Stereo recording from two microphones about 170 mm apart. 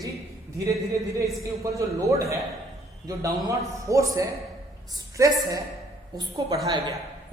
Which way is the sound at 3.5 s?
20° right (ahead or behind).